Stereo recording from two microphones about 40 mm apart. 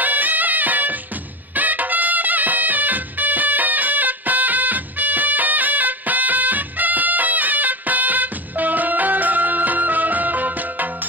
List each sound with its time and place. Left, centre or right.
0.0 s music: right